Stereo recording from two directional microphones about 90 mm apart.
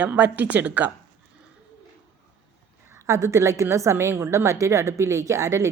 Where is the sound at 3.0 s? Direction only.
35° right (ahead or behind).